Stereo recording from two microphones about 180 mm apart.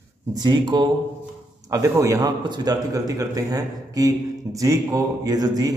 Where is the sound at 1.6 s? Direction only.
20° right (ahead or behind).